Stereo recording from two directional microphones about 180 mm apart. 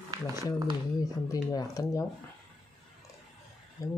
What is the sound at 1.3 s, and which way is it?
Speech, 20° left (ahead or behind).